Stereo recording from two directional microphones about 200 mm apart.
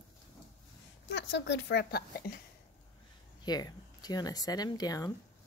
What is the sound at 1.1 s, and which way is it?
Speech, 65° left (ahead or behind).